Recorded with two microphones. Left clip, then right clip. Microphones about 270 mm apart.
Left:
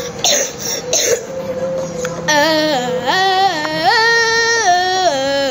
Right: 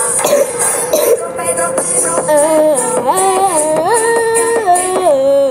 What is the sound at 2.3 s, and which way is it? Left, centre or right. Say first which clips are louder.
Music: right 3 dB; centre.